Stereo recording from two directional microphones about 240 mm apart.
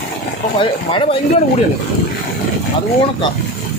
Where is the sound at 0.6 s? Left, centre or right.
Left.